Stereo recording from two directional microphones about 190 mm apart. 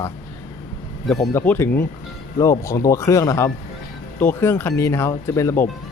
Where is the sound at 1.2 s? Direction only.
15° left (ahead or behind).